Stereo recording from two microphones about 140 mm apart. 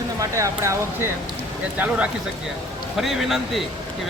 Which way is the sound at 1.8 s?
10° right (ahead or behind).